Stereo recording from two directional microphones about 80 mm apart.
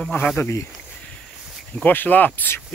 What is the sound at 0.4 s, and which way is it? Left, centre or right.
Speech, left.